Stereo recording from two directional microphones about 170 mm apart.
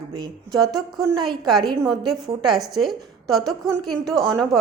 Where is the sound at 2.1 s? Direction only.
Centre (ahead or behind).